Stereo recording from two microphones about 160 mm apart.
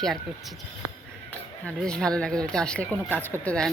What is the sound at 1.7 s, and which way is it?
Speech, 5° left (ahead or behind).